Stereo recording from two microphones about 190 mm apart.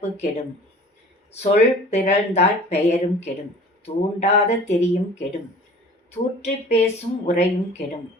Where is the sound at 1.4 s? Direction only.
35° left (ahead or behind).